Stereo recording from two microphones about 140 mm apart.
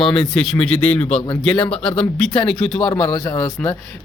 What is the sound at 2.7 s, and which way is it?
A man's voice, 30° left (ahead or behind).